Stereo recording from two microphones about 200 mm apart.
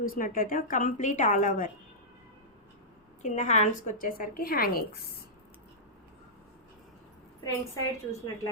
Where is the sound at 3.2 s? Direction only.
35° left (ahead or behind).